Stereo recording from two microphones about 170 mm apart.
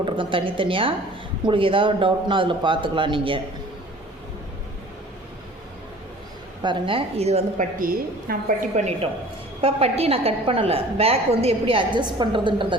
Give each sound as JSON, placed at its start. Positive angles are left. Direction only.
{"t": 0.0, "sound": "a woman's voice", "side_deg": -30}
{"t": 6.6, "sound": "a woman's voice", "side_deg": -30}
{"t": 7.8, "sound": "a woman's voice", "side_deg": -55}